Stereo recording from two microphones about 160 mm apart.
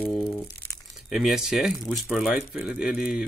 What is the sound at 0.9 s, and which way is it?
Speech, 5° right (ahead or behind).